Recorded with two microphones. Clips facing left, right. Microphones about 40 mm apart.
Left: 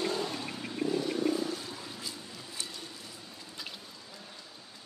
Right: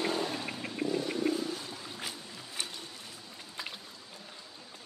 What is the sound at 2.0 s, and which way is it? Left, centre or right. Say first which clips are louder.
Boat: right 1 dB; right.